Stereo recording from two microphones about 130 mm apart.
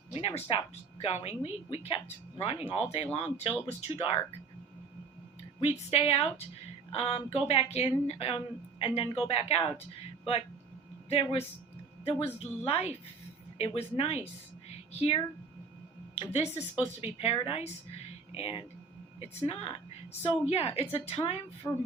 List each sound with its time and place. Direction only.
0.1 s a woman's voice: 45° left (ahead or behind)
5.5 s a woman's voice: 50° left (ahead or behind)
11.1 s a woman's voice: 50° left (ahead or behind)
16.4 s a woman's voice: 50° left (ahead or behind)
21.6 s music: 15° left (ahead or behind)